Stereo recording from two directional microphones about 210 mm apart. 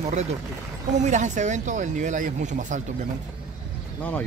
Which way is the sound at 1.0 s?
35° right (ahead or behind).